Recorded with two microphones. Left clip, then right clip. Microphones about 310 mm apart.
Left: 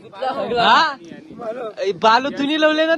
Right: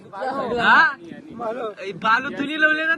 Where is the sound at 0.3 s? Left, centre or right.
Centre.